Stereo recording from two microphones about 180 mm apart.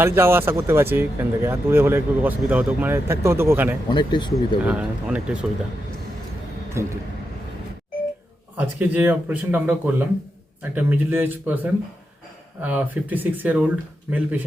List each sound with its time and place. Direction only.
0.0 s speech: 15° right (ahead or behind)
3.8 s speech: 25° left (ahead or behind)
4.6 s speech: 5° right (ahead or behind)
6.8 s speech: 15° right (ahead or behind)
8.5 s speech: 10° right (ahead or behind)